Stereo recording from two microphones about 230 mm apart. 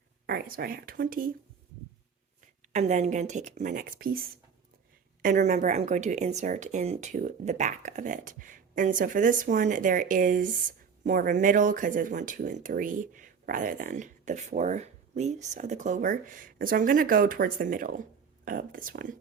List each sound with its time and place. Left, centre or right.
0.3 s a woman's voice: right
2.4 s a woman's voice: right